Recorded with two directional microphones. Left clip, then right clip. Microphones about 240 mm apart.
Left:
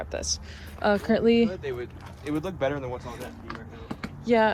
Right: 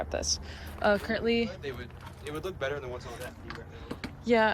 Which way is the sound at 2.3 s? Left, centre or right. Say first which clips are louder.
Left 6 dB; left.